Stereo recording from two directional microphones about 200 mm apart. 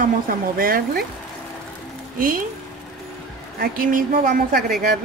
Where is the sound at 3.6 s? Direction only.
45° right (ahead or behind).